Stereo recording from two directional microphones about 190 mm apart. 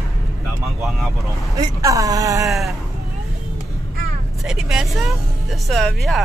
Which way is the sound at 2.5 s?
Centre (ahead or behind).